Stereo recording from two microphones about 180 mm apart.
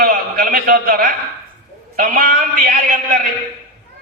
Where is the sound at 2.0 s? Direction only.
50° right (ahead or behind).